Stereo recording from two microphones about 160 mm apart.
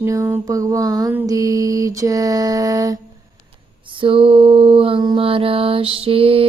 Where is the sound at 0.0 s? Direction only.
15° right (ahead or behind).